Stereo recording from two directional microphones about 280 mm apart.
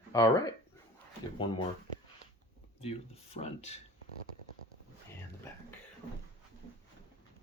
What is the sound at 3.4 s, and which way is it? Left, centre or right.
Speech, left.